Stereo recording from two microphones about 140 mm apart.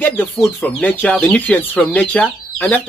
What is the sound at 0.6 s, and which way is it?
Speech, 10° left (ahead or behind).